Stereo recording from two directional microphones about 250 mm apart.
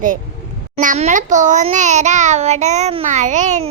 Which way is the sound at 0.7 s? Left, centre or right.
Right.